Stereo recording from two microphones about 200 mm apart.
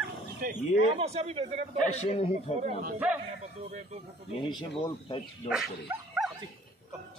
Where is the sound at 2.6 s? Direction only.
35° right (ahead or behind).